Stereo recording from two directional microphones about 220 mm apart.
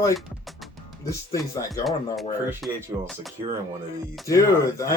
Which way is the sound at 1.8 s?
Centre (ahead or behind).